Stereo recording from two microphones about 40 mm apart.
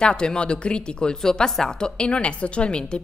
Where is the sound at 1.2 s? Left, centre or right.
Centre; by 2.8 s left.